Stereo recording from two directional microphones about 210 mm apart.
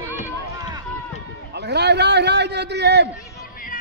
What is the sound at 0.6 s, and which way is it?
Run, 20° right (ahead or behind).